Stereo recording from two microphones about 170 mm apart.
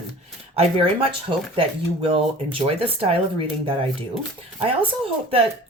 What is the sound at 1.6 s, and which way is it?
Speech, 30° right (ahead or behind).